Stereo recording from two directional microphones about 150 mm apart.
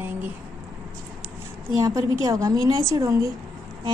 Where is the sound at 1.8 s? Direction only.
20° right (ahead or behind).